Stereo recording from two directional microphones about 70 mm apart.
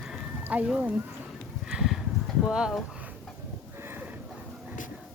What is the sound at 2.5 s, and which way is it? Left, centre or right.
Speech, centre.